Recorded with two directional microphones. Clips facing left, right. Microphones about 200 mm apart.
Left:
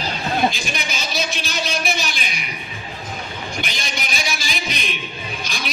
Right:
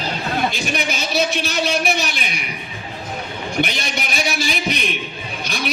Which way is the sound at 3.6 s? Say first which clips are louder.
Right 9 dB; 60° right (ahead or behind).